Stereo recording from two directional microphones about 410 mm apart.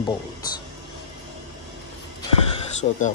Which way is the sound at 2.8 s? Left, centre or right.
Centre.